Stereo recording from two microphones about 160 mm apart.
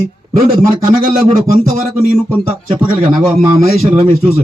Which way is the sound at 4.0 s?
35° right (ahead or behind).